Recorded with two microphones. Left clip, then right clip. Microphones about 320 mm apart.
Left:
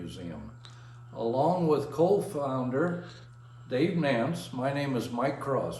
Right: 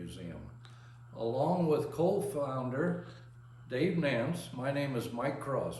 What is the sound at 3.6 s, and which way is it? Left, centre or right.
Speech, centre.